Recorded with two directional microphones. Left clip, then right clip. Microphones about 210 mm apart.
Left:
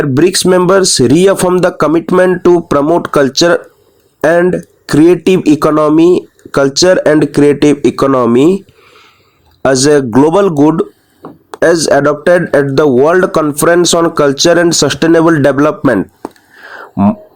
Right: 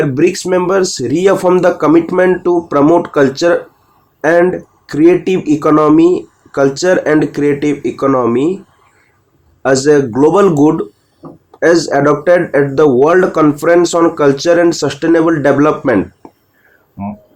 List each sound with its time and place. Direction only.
0.0 s speech: 50° left (ahead or behind)
9.6 s speech: 50° left (ahead or behind)